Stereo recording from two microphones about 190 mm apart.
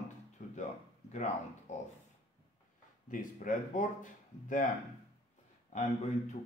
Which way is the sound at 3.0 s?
45° left (ahead or behind).